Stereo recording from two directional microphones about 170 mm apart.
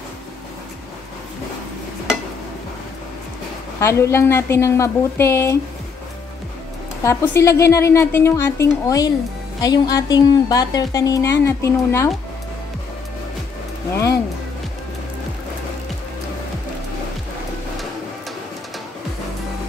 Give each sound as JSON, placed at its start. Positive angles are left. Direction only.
{"t": 3.8, "sound": "a woman's voice", "side_deg": 15}
{"t": 7.0, "sound": "a woman's voice", "side_deg": 15}